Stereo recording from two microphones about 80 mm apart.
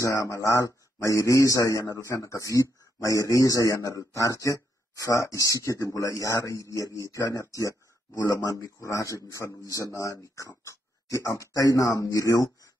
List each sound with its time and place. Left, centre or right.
0.0 s speech: left